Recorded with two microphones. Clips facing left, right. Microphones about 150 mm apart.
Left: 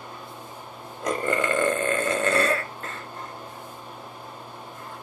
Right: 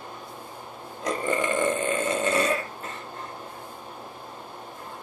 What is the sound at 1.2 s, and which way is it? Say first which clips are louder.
Burping: left 1 dB; 15° right (ahead or behind).